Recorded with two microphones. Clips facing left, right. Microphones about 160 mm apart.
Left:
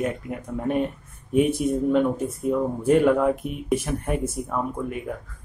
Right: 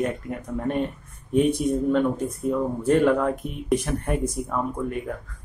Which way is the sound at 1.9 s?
10° left (ahead or behind).